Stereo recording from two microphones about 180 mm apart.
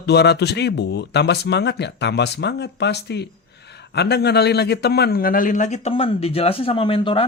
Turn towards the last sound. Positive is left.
turn(degrees=30)  # may be behind; listen again after turning